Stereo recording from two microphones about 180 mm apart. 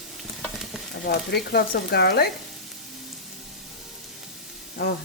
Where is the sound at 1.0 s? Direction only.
65° left (ahead or behind).